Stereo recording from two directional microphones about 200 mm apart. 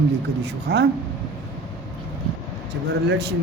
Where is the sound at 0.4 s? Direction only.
55° right (ahead or behind).